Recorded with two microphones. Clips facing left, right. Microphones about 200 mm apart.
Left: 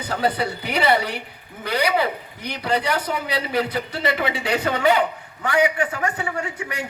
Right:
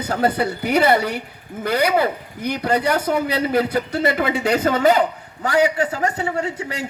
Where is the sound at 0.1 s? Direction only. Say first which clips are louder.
Right 3 dB; 50° right (ahead or behind).